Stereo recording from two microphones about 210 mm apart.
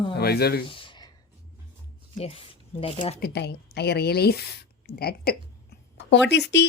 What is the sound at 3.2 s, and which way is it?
Speech, 50° left (ahead or behind).